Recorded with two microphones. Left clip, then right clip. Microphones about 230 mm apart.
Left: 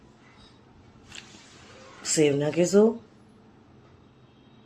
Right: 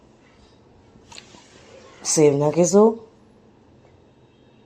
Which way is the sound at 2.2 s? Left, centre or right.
Centre.